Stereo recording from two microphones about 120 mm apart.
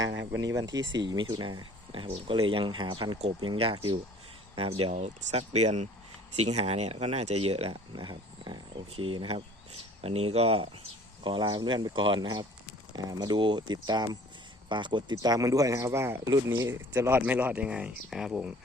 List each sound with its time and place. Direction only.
0.6 s speech: 35° right (ahead or behind); by 10.8 s 55° right (ahead or behind)
11.2 s speech: 40° right (ahead or behind); by 18.5 s 10° right (ahead or behind)